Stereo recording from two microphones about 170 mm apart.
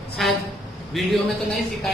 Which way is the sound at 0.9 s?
Centre (ahead or behind).